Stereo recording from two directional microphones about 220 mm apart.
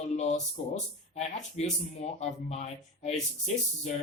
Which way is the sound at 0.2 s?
30° left (ahead or behind).